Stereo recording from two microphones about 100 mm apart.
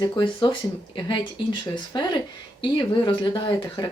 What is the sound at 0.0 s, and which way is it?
Speech, 45° left (ahead or behind).